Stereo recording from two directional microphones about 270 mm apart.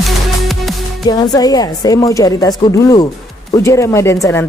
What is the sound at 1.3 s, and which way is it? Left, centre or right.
Speech, centre.